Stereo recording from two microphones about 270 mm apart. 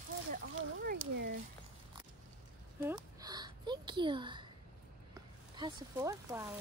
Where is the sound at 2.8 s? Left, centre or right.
Centre.